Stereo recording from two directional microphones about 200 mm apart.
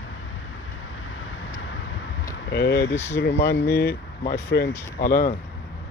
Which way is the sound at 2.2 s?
55° left (ahead or behind).